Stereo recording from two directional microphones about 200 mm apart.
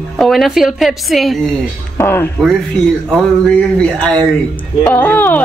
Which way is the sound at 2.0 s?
10° left (ahead or behind).